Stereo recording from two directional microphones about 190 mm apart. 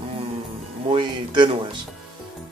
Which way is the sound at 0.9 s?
25° right (ahead or behind).